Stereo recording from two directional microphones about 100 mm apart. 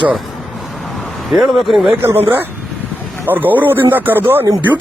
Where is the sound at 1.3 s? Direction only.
Centre (ahead or behind).